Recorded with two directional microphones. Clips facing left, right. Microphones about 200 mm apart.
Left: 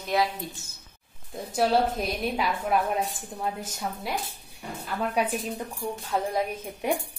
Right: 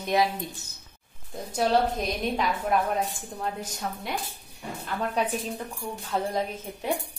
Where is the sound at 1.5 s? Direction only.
5° left (ahead or behind).